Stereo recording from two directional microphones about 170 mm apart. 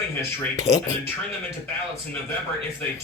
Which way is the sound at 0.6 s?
20° left (ahead or behind).